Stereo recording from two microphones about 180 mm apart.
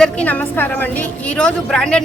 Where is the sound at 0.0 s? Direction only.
5° left (ahead or behind).